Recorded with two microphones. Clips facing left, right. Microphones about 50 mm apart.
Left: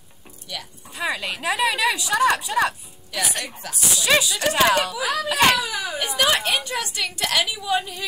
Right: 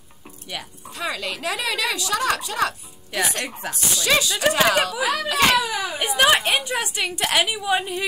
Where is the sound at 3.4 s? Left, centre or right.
Right.